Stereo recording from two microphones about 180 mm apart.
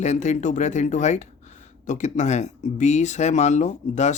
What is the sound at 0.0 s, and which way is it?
Speech, 40° left (ahead or behind).